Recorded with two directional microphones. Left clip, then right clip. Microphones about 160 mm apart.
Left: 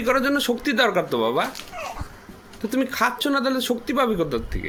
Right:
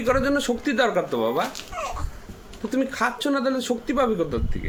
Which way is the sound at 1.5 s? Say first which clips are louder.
Right 2 dB; 30° right (ahead or behind).